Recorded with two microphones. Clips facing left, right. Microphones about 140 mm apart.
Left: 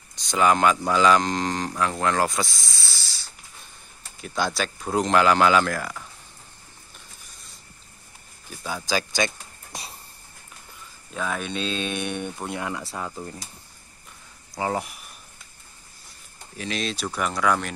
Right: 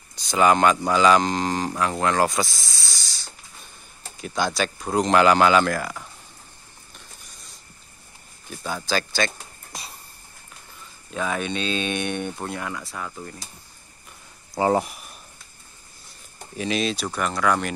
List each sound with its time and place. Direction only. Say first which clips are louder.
0.1 s speech: right 2 dB; centre (ahead or behind)
8.5 s speech: right 2 dB; centre (ahead or behind)
8.8 s speech: even; 15° left (ahead or behind)
11.1 s speech: right 2 dB; centre (ahead or behind)
12.4 s speech: left 1 dB; 15° left (ahead or behind)
14.6 s speech: right 6 dB; 35° right (ahead or behind)
16.5 s speech: right 5 dB; 15° right (ahead or behind)